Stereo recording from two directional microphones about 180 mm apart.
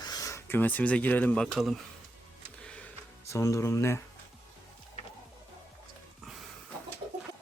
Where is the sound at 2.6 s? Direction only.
5° left (ahead or behind).